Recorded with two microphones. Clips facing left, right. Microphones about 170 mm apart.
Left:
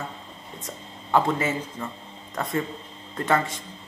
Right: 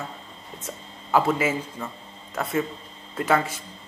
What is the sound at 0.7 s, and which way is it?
A man's voice, 5° right (ahead or behind).